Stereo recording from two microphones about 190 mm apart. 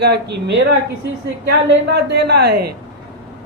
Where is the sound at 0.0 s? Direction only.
65° right (ahead or behind).